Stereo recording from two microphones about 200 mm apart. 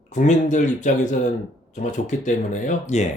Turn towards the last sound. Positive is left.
turn(degrees=35)  # may be behind; listen again after turning